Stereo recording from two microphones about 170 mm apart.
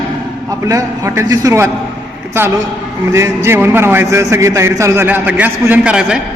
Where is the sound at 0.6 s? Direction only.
20° right (ahead or behind).